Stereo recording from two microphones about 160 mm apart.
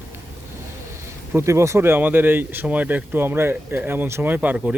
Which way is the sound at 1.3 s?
15° right (ahead or behind).